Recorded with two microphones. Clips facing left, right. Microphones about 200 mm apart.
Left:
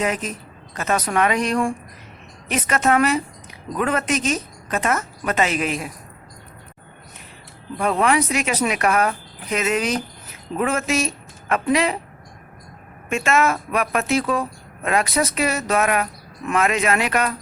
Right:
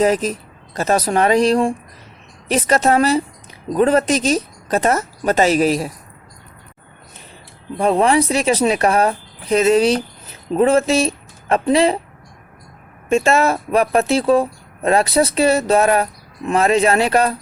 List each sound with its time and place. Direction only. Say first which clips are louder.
0.0 s speech: right 8 dB; 35° right (ahead or behind)
7.8 s speech: right 5 dB; 30° right (ahead or behind)
13.1 s speech: right 5 dB; 30° right (ahead or behind)